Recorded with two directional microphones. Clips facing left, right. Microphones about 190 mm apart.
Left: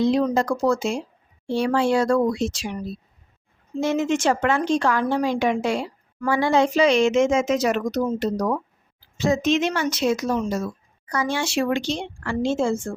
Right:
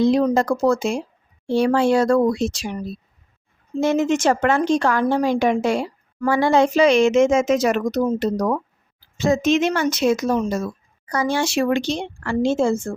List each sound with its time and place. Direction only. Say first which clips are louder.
0.0 s a woman's voice: right 3 dB; 45° right (ahead or behind)
3.8 s a woman's voice: right 3 dB; 50° right (ahead or behind)
11.0 s a woman's voice: right 4 dB; 35° right (ahead or behind)